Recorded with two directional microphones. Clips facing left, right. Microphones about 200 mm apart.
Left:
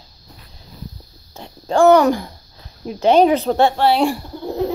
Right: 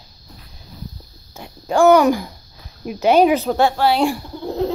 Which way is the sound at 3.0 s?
5° right (ahead or behind).